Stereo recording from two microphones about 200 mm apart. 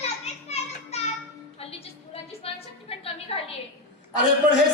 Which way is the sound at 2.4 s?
30° left (ahead or behind).